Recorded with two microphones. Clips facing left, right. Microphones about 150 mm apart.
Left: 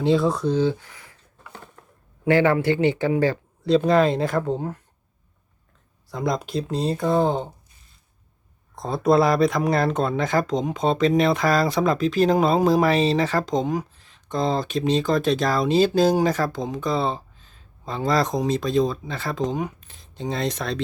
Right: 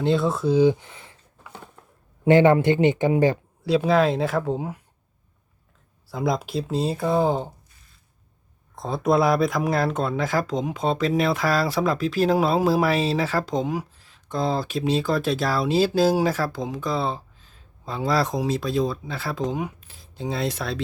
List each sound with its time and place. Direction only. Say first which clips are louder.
0.0 s speech: left 2 dB; centre (ahead or behind); by 1.1 s 25° right (ahead or behind)
2.2 s speech: right 3 dB; 20° right (ahead or behind)
3.7 s speech: left 2 dB; 5° right (ahead or behind)
6.1 s speech: even; 5° right (ahead or behind)
8.7 s speech: left 2 dB; centre (ahead or behind)